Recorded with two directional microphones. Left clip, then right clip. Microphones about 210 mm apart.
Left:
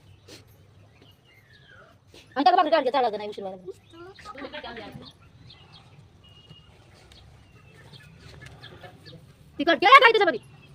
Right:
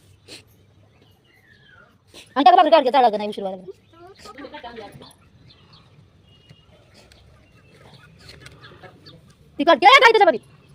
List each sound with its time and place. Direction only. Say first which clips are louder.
0.3 s vehicle: right 6 dB; 15° right (ahead or behind)
2.1 s a woman's voice: right 7 dB; 40° right (ahead or behind)
9.6 s a woman's voice: right 3 dB; 25° right (ahead or behind)